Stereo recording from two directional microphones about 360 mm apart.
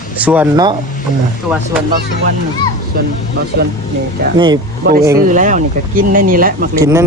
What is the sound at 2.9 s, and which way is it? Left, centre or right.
Speech, right.